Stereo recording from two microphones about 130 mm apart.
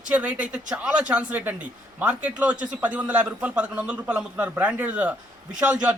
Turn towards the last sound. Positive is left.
turn(degrees=-10)  # may be behind; listen again after turning